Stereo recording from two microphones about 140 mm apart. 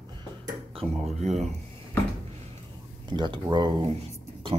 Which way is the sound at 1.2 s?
55° right (ahead or behind).